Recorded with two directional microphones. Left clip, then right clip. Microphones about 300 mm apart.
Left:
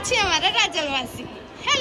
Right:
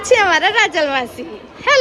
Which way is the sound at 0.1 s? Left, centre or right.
Centre.